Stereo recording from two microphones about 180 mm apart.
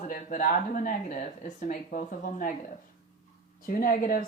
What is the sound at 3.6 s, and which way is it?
Speech, 50° left (ahead or behind).